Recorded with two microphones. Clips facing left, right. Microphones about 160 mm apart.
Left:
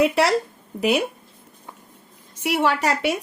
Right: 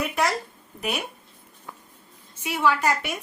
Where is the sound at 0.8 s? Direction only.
90° left.